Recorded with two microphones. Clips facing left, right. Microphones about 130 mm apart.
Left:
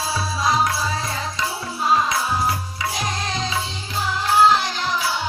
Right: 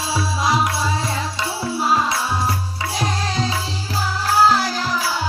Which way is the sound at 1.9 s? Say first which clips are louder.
Left 1 dB; 30° right (ahead or behind).